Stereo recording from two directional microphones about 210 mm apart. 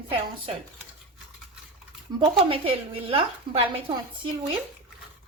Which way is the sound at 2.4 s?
25° right (ahead or behind).